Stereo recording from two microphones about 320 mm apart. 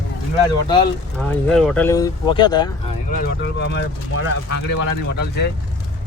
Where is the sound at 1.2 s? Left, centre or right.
Centre.